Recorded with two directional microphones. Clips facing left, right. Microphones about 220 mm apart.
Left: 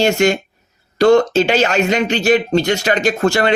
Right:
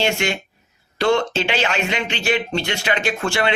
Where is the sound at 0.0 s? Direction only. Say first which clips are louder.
Left 8 dB; 40° left (ahead or behind).